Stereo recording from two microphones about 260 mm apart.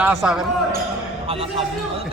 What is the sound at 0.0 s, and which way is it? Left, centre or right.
Speech, centre.